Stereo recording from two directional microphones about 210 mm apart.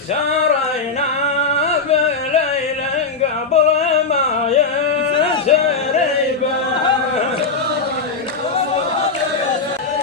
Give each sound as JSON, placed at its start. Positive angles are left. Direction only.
{"t": 1.5, "sound": "carnatic music", "side_deg": 30}
{"t": 3.5, "sound": "music", "side_deg": 30}
{"t": 5.1, "sound": "a sound", "side_deg": 25}